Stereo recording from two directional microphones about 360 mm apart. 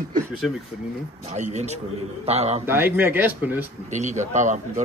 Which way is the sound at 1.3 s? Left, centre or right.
Centre.